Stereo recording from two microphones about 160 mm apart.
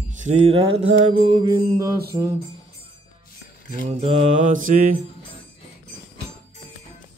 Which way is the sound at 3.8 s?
40° right (ahead or behind).